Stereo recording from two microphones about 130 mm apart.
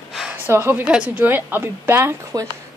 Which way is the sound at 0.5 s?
15° right (ahead or behind).